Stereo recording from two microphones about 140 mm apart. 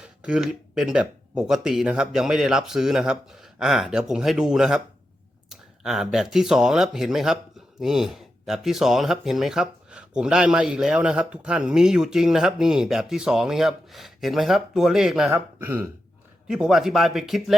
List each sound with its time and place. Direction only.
0.0 s speech: 5° right (ahead or behind)
15.3 s speech: 15° right (ahead or behind)